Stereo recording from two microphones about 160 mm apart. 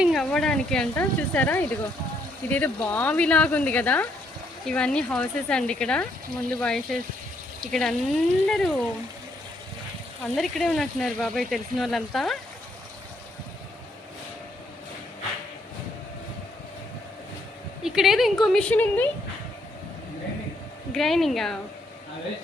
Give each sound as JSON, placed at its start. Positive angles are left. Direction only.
{"t": 0.0, "sound": "speech", "side_deg": 0}
{"t": 10.3, "sound": "speech", "side_deg": 0}
{"t": 17.8, "sound": "speech", "side_deg": 0}
{"t": 20.9, "sound": "speech", "side_deg": 0}